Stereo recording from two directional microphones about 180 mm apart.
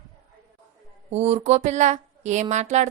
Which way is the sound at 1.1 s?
35° right (ahead or behind).